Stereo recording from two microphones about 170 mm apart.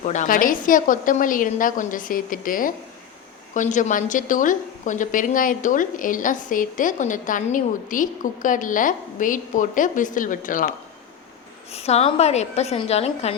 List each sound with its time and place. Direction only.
0.0 s a woman's voice: 45° left (ahead or behind)
11.7 s a woman's voice: 40° left (ahead or behind)